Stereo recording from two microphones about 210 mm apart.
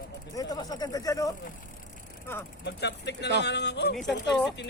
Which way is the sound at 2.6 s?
55° left (ahead or behind).